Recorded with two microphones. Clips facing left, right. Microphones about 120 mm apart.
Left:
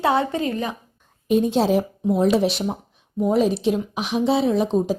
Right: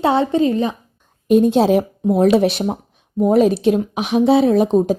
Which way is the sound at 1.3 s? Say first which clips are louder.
Right 5 dB; 55° right (ahead or behind).